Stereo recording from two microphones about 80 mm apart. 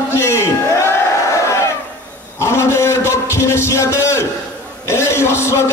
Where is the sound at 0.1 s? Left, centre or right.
Left.